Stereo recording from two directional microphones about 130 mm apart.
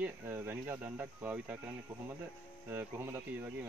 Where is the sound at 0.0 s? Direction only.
15° right (ahead or behind).